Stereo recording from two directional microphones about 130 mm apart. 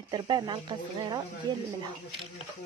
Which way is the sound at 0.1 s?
35° right (ahead or behind).